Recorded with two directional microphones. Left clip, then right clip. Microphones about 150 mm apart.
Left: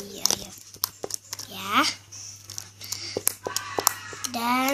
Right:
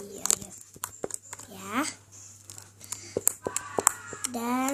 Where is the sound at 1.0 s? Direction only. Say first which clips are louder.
Left 3 dB; 10° right (ahead or behind).